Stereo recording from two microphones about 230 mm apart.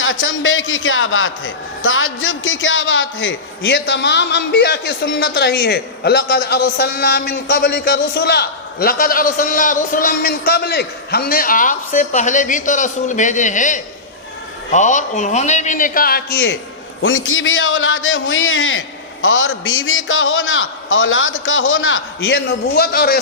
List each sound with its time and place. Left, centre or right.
0.0 s a man's voice: left
17.0 s a man's voice: left